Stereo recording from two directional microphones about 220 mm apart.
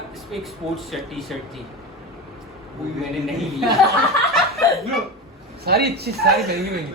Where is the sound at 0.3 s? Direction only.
Centre (ahead or behind).